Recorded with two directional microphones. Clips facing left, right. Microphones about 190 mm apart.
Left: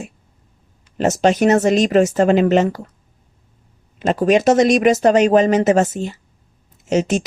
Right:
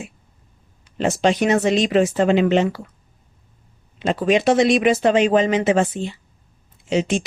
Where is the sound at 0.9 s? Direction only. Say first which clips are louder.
Left 3 dB; 45° left (ahead or behind).